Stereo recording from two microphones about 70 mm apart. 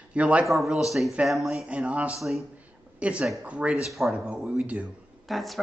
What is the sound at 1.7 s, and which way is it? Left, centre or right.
Speech, centre.